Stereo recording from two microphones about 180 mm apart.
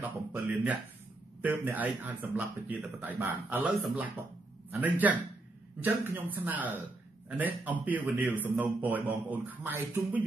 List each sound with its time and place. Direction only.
0.0 s a man's voice: 10° right (ahead or behind)